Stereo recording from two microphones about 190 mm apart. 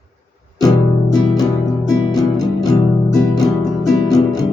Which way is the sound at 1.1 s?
20° left (ahead or behind).